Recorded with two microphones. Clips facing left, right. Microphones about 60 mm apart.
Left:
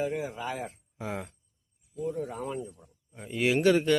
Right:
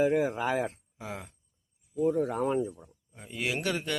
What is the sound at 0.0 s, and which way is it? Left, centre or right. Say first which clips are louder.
Speech: right 6 dB; right.